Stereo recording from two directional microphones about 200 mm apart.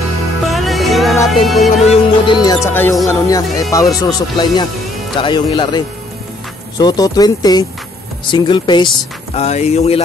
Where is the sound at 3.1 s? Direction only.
15° left (ahead or behind).